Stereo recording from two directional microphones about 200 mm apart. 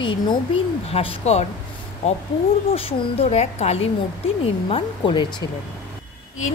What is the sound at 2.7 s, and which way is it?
A woman's voice, 30° left (ahead or behind).